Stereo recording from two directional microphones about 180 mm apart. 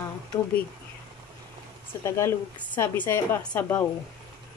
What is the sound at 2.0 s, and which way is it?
A woman's voice, 15° left (ahead or behind).